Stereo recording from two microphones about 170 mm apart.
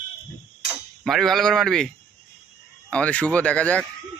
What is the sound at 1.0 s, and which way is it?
Speech, centre (ahead or behind).